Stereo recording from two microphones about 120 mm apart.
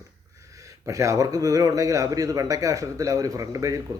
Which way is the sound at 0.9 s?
25° right (ahead or behind).